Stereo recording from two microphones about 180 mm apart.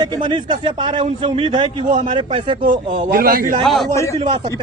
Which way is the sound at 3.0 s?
50° right (ahead or behind).